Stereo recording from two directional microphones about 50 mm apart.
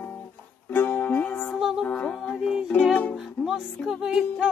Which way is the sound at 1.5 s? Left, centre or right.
Centre.